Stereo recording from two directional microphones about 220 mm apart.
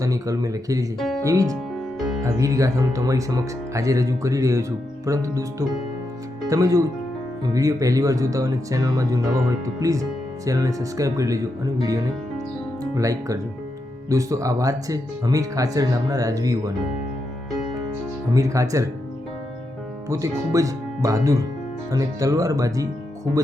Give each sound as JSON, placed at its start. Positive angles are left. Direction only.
{"t": 0.0, "sound": "speech", "side_deg": -15}
{"t": 0.9, "sound": "speech", "side_deg": 0}
{"t": 1.2, "sound": "speech", "side_deg": -15}
{"t": 18.3, "sound": "speech", "side_deg": -15}
{"t": 20.1, "sound": "speech", "side_deg": -15}